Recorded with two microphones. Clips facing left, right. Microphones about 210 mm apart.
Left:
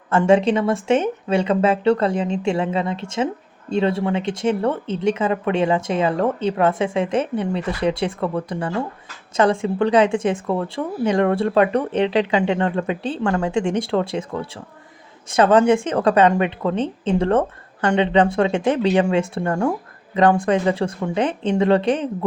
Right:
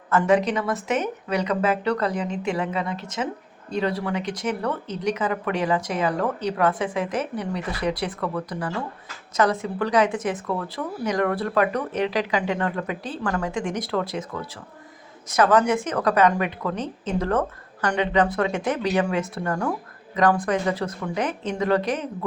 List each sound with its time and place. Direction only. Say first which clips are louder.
0.1 s speech: left 4 dB; 25° left (ahead or behind)